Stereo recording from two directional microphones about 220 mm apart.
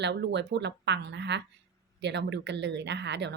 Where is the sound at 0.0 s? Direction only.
50° right (ahead or behind).